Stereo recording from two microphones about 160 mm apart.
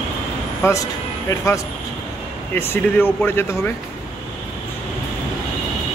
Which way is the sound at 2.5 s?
15° left (ahead or behind).